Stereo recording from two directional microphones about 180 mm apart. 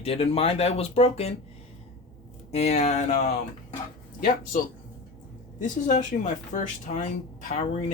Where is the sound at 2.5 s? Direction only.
35° left (ahead or behind).